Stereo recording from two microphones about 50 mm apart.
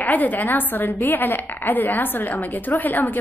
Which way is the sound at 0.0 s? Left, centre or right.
Left.